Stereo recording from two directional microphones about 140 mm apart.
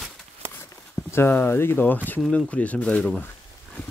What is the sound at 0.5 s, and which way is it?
Speech, 20° left (ahead or behind).